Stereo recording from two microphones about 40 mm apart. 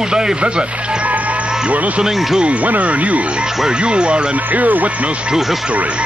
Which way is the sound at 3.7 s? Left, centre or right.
Right.